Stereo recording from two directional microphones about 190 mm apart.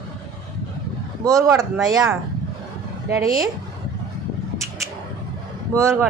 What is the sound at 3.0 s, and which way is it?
Speech, 20° right (ahead or behind).